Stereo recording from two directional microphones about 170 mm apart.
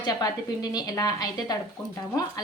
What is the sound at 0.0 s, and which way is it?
A woman's voice, 25° left (ahead or behind).